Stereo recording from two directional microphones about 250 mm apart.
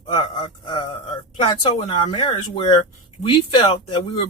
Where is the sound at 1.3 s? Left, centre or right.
Left.